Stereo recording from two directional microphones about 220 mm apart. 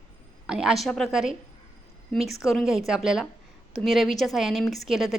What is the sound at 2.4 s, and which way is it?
A woman's voice, centre (ahead or behind).